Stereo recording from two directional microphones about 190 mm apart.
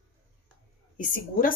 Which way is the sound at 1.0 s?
45° left (ahead or behind).